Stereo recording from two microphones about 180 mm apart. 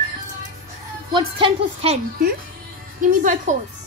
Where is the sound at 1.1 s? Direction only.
30° right (ahead or behind).